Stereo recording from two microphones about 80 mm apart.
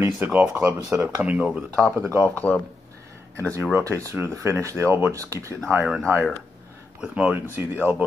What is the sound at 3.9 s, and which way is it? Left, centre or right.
Speech, right.